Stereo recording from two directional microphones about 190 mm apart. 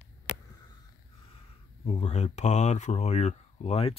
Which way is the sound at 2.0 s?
35° left (ahead or behind).